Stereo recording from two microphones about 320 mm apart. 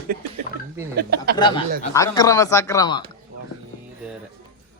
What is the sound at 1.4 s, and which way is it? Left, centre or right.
Speech, centre.